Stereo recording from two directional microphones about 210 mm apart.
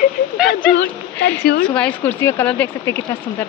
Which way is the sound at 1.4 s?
50° left (ahead or behind).